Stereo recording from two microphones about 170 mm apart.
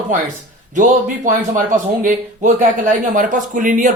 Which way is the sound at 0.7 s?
50° right (ahead or behind).